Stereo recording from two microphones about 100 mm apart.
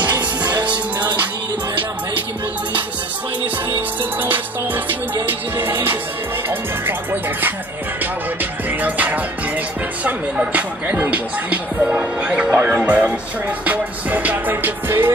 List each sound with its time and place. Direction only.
0.1 s music: 45° right (ahead or behind)
3.7 s music: 20° right (ahead or behind)
10.0 s speech: 10° right (ahead or behind)
13.7 s music: 15° right (ahead or behind)